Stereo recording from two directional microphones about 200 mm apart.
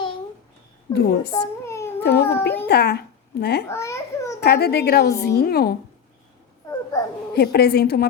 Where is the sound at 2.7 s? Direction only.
55° left (ahead or behind).